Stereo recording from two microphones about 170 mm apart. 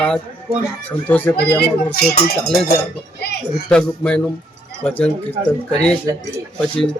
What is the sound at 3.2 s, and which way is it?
Speech, 75° left (ahead or behind).